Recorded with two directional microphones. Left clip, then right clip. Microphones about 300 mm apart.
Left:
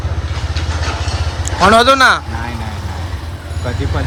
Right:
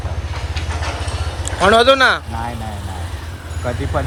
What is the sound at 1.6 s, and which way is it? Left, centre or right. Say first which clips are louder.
Speech: left 3 dB; centre.